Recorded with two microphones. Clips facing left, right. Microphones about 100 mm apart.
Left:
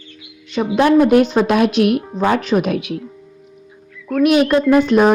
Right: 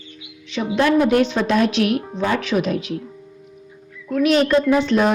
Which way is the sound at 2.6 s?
65° left (ahead or behind).